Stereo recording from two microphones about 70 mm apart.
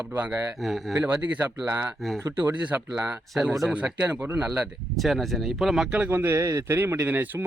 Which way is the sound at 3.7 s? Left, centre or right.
Right.